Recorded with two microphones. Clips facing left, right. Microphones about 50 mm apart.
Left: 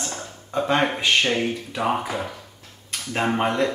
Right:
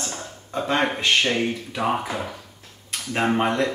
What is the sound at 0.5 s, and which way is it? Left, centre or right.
Speech, centre.